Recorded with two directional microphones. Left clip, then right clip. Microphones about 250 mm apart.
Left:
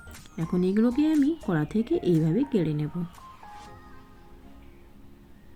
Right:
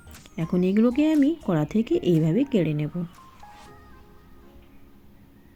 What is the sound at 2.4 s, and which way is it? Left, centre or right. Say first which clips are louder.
Speech: right 3 dB; left.